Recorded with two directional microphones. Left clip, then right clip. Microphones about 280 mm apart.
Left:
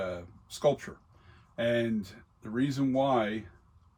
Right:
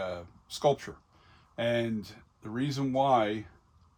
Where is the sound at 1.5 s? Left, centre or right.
Right.